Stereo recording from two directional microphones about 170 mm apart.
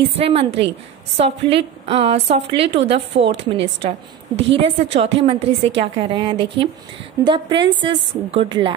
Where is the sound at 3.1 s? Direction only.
90° right.